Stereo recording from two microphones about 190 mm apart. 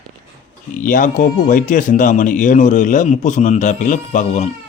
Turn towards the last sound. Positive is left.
turn(degrees=40)  # may be behind; listen again after turning